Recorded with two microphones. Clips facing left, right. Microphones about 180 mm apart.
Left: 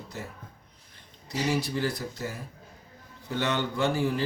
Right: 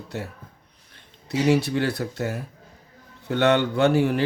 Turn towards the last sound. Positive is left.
turn(degrees=-65)  # may be behind; listen again after turning